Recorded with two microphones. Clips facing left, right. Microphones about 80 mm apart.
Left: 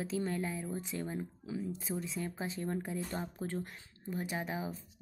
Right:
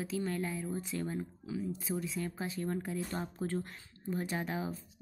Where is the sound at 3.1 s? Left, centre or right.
Centre.